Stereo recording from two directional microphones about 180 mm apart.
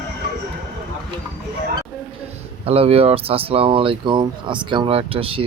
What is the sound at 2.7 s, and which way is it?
Speech, 35° right (ahead or behind).